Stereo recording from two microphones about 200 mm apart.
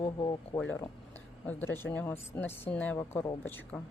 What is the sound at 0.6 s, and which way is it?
A woman's voice, 10° left (ahead or behind).